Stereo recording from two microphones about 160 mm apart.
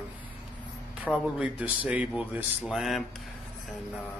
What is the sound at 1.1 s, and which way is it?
Speech, 10° right (ahead or behind).